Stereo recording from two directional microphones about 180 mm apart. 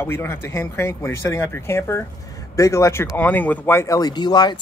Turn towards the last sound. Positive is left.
turn(degrees=25)  # may be behind; listen again after turning